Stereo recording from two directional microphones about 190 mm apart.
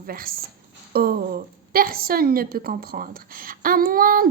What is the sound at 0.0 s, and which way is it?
A woman's voice, 50° right (ahead or behind).